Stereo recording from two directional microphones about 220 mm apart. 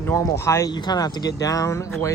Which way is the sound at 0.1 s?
10° left (ahead or behind).